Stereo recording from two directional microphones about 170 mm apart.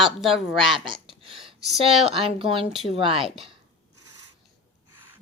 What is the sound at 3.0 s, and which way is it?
Speech, 30° right (ahead or behind).